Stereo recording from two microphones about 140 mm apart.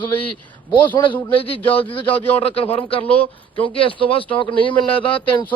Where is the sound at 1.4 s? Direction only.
40° left (ahead or behind).